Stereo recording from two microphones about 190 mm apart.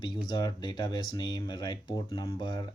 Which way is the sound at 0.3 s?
20° left (ahead or behind).